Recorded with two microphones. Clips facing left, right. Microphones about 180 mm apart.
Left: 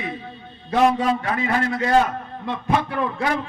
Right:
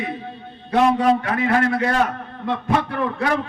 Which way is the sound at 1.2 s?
60° right (ahead or behind).